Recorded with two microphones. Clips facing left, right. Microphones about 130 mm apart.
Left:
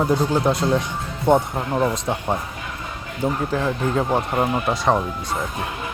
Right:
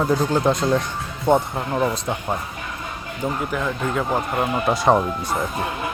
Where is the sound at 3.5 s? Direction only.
30° left (ahead or behind).